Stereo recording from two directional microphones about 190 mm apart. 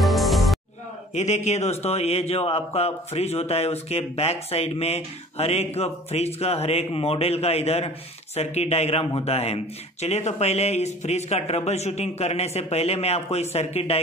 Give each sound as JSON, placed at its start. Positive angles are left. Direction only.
{"t": 0.0, "sound": "music", "side_deg": 0}
{"t": 1.1, "sound": "a man's voice", "side_deg": 35}